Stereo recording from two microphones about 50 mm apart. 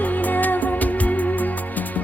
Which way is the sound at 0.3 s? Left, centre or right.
Left.